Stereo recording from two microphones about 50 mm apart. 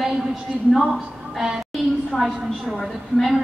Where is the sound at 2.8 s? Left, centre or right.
Centre.